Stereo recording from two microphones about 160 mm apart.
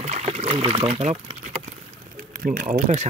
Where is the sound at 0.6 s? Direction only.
40° right (ahead or behind).